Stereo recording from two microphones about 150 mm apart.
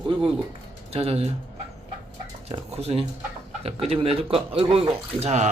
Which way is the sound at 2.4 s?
45° right (ahead or behind).